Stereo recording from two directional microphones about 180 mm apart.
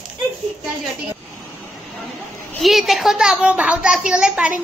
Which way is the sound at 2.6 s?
Centre (ahead or behind).